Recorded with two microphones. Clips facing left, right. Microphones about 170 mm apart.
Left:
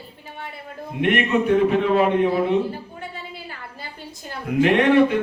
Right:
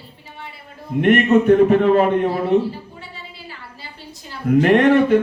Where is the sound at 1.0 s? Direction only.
45° right (ahead or behind).